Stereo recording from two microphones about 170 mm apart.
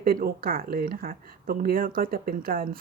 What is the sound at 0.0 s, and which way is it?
Speech, 60° right (ahead or behind).